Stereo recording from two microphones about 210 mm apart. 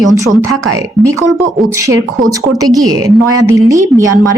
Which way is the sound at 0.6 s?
15° right (ahead or behind).